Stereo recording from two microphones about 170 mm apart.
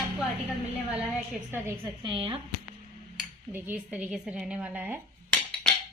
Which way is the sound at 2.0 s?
25° right (ahead or behind).